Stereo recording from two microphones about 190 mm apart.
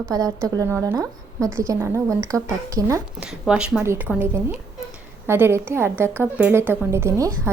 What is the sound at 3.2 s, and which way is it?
A woman's voice, 5° right (ahead or behind).